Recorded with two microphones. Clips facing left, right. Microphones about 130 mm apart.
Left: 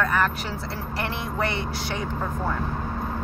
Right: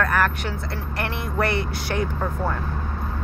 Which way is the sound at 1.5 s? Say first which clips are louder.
Right 3 dB; 25° left (ahead or behind).